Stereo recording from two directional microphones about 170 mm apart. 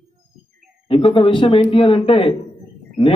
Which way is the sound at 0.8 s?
30° left (ahead or behind).